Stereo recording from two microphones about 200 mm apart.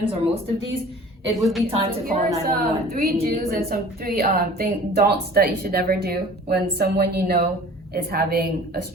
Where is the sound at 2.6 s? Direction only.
50° right (ahead or behind).